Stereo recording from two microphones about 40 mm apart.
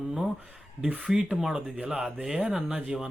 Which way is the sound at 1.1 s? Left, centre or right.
Centre.